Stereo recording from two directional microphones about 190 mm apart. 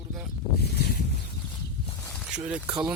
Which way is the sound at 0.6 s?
55° left (ahead or behind).